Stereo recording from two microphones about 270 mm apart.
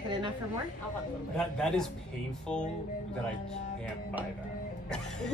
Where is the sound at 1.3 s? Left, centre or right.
Centre.